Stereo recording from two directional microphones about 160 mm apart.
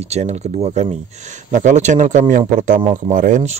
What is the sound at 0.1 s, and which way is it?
Speech, 45° right (ahead or behind).